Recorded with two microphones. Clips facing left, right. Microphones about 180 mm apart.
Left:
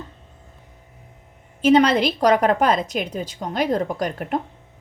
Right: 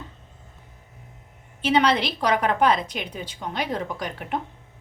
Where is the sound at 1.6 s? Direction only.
45° left (ahead or behind).